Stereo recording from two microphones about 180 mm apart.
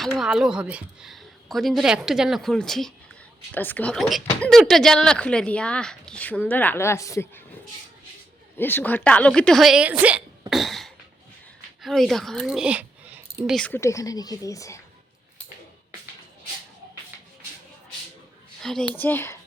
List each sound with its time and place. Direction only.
0.2 s speech: 5° right (ahead or behind); by 7.4 s 15° left (ahead or behind)
8.5 s speech: 10° left (ahead or behind); by 10.2 s 10° right (ahead or behind)
10.5 s cough: centre (ahead or behind)
11.8 s speech: centre (ahead or behind)
13.6 s speech: 10° left (ahead or behind)
18.6 s speech: centre (ahead or behind)